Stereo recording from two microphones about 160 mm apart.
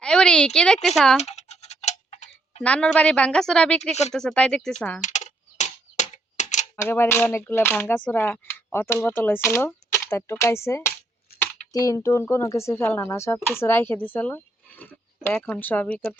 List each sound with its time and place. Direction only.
0.0 s speech: 5° left (ahead or behind)
1.2 s tick-tock: 45° left (ahead or behind)
2.6 s speech: 5° left (ahead or behind)
4.9 s computer keyboard: 50° left (ahead or behind)
6.7 s speech: 15° left (ahead or behind)